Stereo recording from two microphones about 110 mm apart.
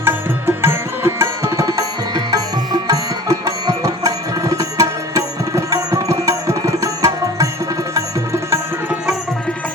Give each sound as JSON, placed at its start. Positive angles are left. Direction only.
{"t": 0.0, "sound": "music", "side_deg": -20}